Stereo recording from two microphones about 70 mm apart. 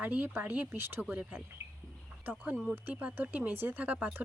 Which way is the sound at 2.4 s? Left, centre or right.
Right.